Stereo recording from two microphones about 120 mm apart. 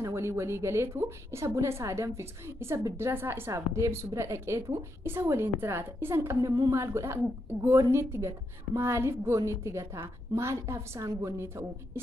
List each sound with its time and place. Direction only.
0.0 s a woman's voice: 25° right (ahead or behind)